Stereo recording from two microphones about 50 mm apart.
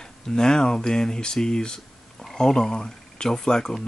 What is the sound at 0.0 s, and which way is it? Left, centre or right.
Speech, centre.